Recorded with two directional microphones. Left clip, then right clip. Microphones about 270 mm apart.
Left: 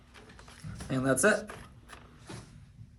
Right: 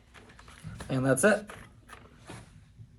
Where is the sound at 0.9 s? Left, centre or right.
Right.